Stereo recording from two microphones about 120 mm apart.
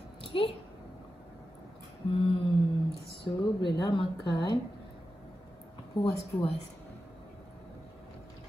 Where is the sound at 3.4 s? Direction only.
40° left (ahead or behind).